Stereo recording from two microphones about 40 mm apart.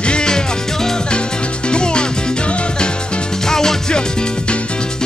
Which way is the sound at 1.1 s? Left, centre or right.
Left.